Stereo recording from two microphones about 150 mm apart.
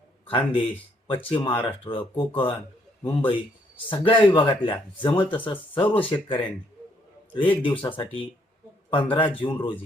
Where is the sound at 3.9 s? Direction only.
35° left (ahead or behind).